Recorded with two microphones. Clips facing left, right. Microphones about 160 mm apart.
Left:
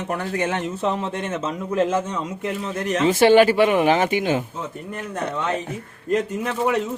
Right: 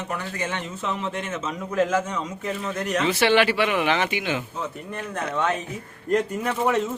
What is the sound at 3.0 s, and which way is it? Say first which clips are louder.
A man's voice: left 7 dB; 40° left (ahead or behind).